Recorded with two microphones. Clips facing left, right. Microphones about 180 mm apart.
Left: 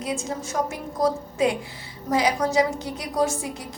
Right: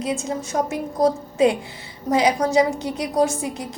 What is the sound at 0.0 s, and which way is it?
A woman's voice, 25° right (ahead or behind).